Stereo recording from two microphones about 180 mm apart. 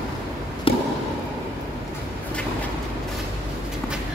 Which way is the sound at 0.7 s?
30° left (ahead or behind).